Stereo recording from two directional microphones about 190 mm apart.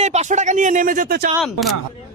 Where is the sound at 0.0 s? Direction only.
35° right (ahead or behind).